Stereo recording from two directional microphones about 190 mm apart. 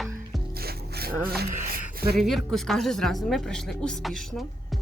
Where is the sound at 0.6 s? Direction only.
55° right (ahead or behind).